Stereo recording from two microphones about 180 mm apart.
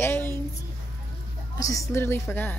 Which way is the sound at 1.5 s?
20° left (ahead or behind).